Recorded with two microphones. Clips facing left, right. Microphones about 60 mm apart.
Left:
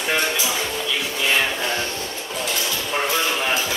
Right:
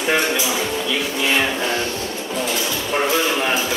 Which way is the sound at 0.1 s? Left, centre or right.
Centre.